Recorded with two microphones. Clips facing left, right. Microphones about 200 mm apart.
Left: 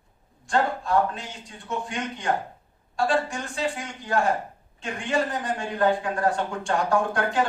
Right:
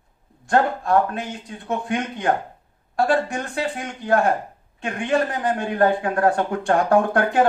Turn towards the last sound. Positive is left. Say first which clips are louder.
# right 6 dB
turn(degrees=-60)  # may be behind; listen again after turning